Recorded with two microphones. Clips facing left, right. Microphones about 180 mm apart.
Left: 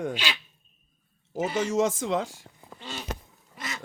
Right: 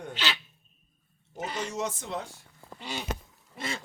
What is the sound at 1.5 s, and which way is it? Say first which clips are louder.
Speech: left 9 dB; 90° left.